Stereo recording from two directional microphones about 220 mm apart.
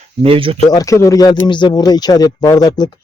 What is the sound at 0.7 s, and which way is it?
Speech, 15° left (ahead or behind).